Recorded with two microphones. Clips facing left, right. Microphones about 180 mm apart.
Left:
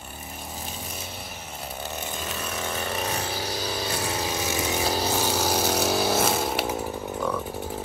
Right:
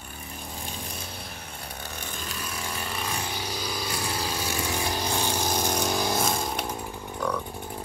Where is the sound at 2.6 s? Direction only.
35° left (ahead or behind).